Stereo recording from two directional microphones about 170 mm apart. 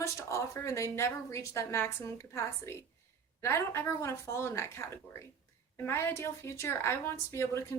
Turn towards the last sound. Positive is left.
turn(degrees=15)  # may be behind; listen again after turning